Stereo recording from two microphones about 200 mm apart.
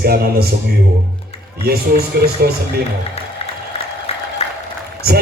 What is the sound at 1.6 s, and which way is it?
Speech, 50° right (ahead or behind).